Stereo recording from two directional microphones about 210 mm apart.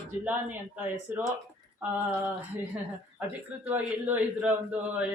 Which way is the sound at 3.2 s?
5° right (ahead or behind).